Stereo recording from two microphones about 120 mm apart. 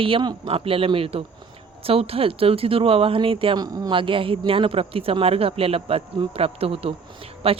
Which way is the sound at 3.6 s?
35° right (ahead or behind).